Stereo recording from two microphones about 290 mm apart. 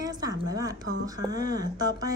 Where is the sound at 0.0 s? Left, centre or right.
Centre.